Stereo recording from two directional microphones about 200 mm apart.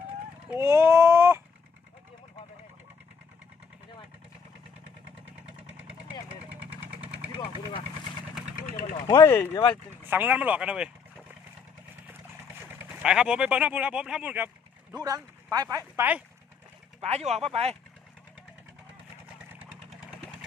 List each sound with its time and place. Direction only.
0.6 s a sound: 15° right (ahead or behind)
9.0 s speech: 15° left (ahead or behind)
10.0 s speech: 10° right (ahead or behind)
12.8 s speech: 5° right (ahead or behind)
17.0 s speech: 30° right (ahead or behind)
19.9 s vehicle: 5° right (ahead or behind)